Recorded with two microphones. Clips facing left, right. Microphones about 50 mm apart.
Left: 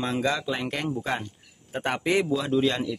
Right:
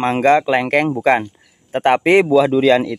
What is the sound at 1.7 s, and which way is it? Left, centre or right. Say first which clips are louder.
Speech: right 12 dB; right.